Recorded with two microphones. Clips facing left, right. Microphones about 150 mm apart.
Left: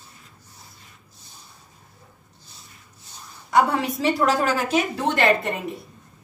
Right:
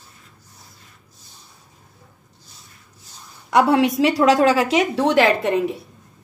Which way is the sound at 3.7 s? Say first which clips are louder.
Right 6 dB; 90° right.